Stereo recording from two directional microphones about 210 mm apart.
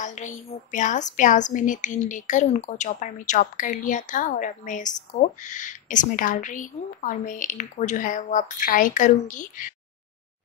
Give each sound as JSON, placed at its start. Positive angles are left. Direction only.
{"t": 0.0, "sound": "a woman's voice", "side_deg": 35}